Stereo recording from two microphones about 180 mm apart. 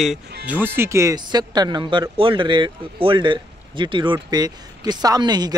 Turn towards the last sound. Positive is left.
turn(degrees=-25)  # may be behind; listen again after turning